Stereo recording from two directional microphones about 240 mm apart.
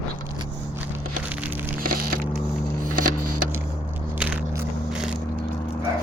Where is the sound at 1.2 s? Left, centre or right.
Centre.